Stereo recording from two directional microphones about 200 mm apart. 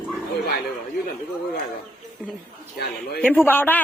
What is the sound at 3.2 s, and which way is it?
Speech, 5° left (ahead or behind).